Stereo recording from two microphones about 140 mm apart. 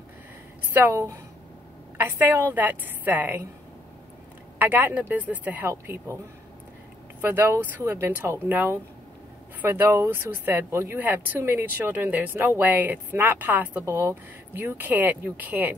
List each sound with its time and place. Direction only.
0.7 s speech: 15° right (ahead or behind)
4.6 s speech: 15° right (ahead or behind)
7.2 s speech: 15° right (ahead or behind)